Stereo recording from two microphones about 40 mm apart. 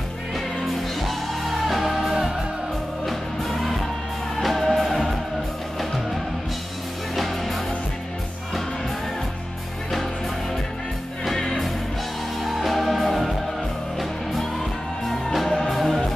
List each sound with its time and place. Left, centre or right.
1.0 s music: centre
2.0 s music: centre
3.1 s music: centre
7.2 s music: centre
11.2 s music: centre
15.0 s music: centre